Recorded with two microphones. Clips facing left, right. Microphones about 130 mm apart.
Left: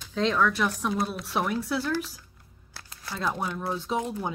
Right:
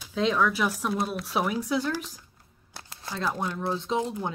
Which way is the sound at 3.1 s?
Centre (ahead or behind).